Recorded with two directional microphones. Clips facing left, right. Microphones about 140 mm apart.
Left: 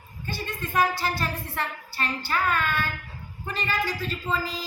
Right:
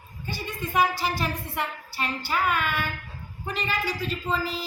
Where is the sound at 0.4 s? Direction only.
15° right (ahead or behind).